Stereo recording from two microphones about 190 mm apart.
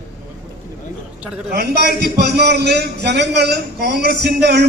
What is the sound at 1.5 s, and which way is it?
A man's voice, 60° right (ahead or behind).